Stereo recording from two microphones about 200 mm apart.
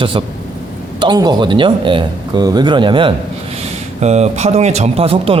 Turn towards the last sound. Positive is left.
turn(degrees=-30)  # may be behind; listen again after turning